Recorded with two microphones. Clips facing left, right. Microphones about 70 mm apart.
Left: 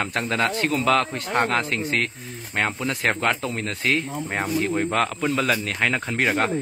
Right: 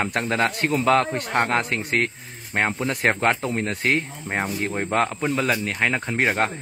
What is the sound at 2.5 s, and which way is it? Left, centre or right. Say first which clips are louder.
Speech: right 2 dB; right.